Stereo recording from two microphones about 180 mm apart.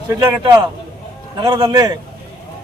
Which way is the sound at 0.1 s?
20° right (ahead or behind).